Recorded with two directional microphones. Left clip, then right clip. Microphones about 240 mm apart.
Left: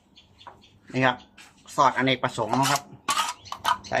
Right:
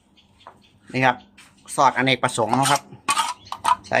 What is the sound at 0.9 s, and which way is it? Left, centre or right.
Speech, right.